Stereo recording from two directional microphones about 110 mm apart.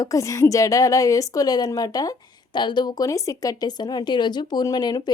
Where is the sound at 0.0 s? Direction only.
30° left (ahead or behind).